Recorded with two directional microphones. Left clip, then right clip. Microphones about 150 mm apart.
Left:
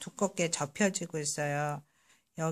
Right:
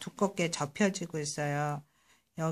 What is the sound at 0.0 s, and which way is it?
Speech, 20° left (ahead or behind).